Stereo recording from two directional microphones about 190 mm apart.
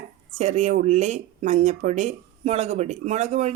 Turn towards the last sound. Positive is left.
turn(degrees=-35)  # may be behind; listen again after turning